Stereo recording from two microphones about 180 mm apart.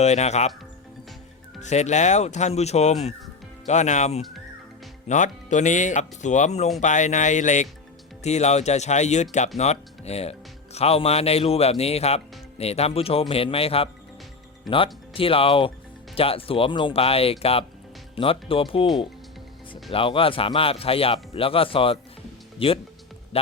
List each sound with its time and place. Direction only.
0.0 s speech: 40° left (ahead or behind)
1.6 s speech: 40° left (ahead or behind)
14.7 s speech: centre (ahead or behind)
15.1 s speech: 30° left (ahead or behind)